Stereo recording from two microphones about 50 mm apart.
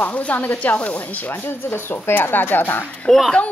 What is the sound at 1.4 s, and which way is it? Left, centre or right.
Speech, left.